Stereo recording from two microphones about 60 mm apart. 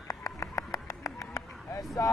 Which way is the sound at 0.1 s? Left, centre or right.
Left.